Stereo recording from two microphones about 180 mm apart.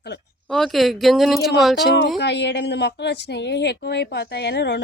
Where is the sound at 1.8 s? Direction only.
70° left (ahead or behind).